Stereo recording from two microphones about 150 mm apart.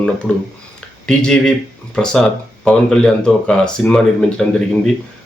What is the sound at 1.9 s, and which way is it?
Speech, 5° left (ahead or behind).